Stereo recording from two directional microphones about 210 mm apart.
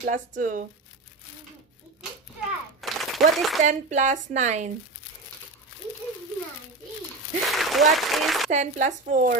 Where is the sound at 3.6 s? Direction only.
35° right (ahead or behind).